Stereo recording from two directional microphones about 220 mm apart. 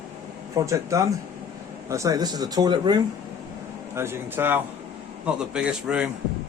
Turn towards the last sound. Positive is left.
turn(degrees=-5)  # may be behind; listen again after turning